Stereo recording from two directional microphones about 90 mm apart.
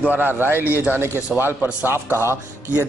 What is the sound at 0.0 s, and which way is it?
A man's voice, 20° right (ahead or behind).